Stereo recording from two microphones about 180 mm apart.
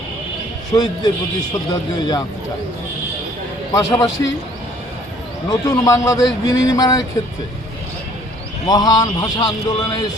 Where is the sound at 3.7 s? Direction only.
20° left (ahead or behind).